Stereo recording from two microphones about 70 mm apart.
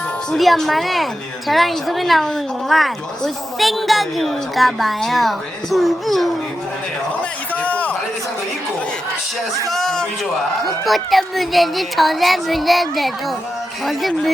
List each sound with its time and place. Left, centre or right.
0.3 s a woman's voice: centre
7.2 s a sound: left
9.6 s a man's voice: centre